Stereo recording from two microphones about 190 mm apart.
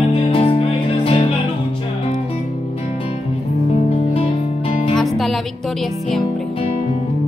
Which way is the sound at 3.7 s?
35° left (ahead or behind).